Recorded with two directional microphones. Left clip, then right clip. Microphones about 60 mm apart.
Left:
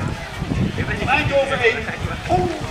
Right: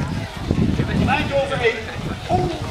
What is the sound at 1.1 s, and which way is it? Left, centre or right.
Speech, centre.